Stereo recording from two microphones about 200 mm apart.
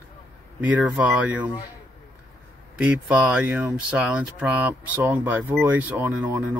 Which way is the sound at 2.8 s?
5° right (ahead or behind).